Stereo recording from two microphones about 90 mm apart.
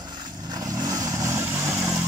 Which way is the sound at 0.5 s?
45° right (ahead or behind).